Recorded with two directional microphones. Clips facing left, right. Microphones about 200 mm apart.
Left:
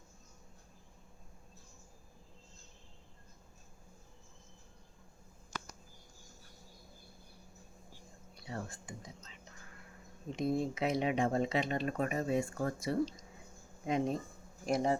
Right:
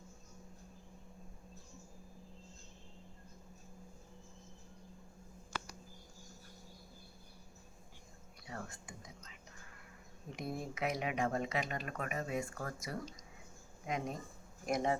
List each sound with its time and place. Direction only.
8.4 s speech: 30° left (ahead or behind)